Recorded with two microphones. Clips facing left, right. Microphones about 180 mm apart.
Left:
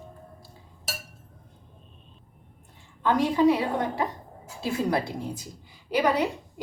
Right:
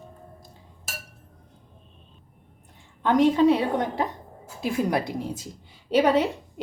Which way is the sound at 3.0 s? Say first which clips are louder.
Right 3 dB; 20° right (ahead or behind).